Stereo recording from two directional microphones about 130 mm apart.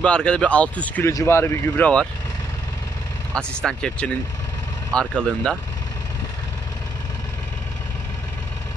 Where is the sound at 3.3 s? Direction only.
5° left (ahead or behind).